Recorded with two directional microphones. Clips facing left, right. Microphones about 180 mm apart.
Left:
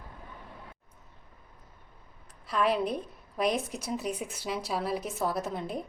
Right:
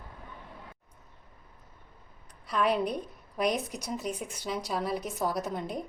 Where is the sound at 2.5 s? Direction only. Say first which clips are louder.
Even; centre (ahead or behind).